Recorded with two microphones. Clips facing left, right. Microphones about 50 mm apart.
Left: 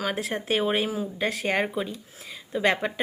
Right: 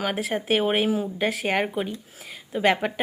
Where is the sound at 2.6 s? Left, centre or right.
Centre.